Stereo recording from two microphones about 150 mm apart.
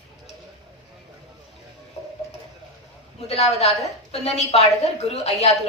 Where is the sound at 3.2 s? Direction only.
45° left (ahead or behind).